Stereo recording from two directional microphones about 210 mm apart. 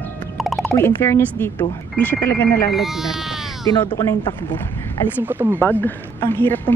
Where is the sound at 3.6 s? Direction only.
15° left (ahead or behind).